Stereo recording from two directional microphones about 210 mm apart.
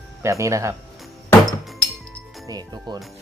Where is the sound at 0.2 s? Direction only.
15° right (ahead or behind).